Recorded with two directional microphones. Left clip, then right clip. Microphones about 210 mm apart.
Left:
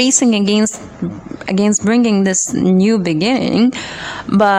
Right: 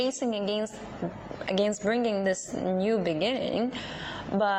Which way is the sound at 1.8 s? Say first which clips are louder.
Left 11 dB; 25° left (ahead or behind).